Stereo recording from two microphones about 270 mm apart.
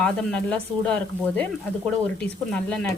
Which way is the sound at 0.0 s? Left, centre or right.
Centre.